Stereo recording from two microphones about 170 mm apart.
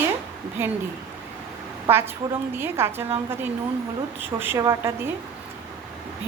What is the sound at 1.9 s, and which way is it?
A woman's voice, 15° right (ahead or behind).